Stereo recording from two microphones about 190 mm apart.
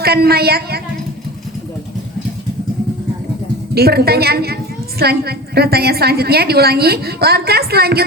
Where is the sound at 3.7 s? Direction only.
55° right (ahead or behind).